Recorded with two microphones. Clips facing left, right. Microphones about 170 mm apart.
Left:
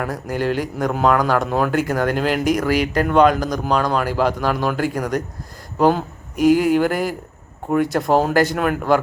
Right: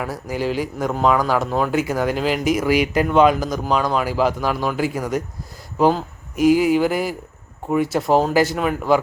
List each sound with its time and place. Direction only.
0.0 s speech: 5° right (ahead or behind)
6.3 s speech: 45° left (ahead or behind)
6.6 s speech: 5° right (ahead or behind)